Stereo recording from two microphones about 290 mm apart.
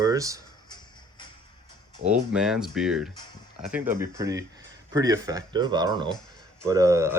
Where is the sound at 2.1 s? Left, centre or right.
Centre.